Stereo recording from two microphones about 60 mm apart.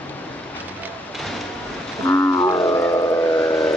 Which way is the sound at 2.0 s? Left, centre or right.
Left.